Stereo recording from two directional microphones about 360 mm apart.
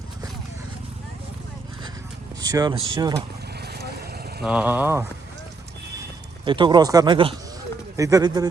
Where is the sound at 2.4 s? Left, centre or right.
Centre.